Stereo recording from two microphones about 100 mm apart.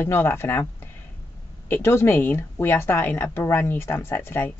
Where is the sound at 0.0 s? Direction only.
25° left (ahead or behind).